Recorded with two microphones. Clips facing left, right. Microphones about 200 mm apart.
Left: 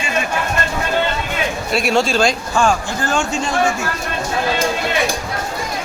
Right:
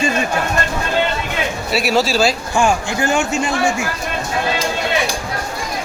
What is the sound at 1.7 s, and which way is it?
A man's voice, 5° right (ahead or behind).